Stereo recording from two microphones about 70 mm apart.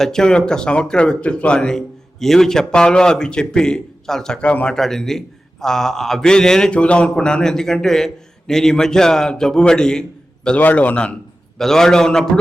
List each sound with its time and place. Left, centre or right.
0.0 s a man's voice: centre
10.6 s a man's voice: left
11.5 s a man's voice: centre